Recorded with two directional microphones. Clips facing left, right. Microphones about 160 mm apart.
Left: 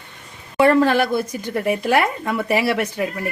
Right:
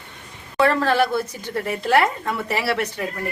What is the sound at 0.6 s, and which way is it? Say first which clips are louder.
Speech: left 3 dB; 15° left (ahead or behind).